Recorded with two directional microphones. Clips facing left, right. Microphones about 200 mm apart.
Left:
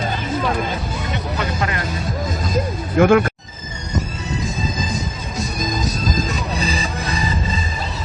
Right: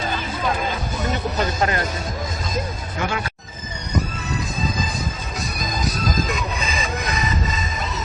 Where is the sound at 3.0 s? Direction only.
55° left (ahead or behind).